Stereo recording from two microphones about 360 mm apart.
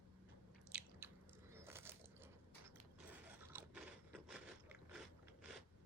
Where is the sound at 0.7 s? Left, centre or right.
Centre.